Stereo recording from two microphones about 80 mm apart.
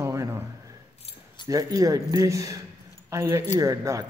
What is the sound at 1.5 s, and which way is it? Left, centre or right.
A man's voice, right.